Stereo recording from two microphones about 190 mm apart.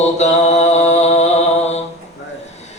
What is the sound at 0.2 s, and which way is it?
Mantra, 35° left (ahead or behind).